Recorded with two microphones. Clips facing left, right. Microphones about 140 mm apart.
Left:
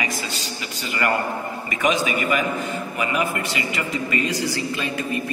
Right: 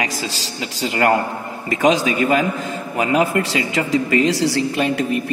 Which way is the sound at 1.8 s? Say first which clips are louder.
Right 5 dB; 90° right.